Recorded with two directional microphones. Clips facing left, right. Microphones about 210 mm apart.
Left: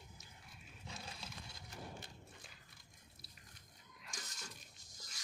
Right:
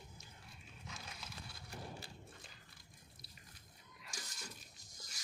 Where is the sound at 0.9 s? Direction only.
30° left (ahead or behind).